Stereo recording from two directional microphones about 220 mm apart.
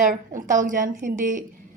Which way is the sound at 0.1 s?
35° right (ahead or behind).